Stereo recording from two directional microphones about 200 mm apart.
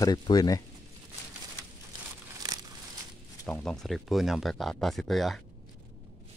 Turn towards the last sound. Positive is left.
turn(degrees=0)  # may be behind; listen again after turning